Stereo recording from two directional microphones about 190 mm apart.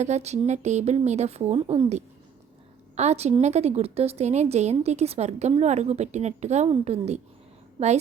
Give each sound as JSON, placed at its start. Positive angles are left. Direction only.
{"t": 0.0, "sound": "a woman's voice", "side_deg": -35}